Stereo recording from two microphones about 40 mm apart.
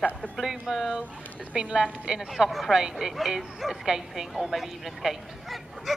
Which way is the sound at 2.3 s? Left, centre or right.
Centre.